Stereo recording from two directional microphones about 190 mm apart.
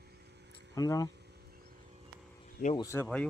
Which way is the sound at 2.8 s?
15° left (ahead or behind).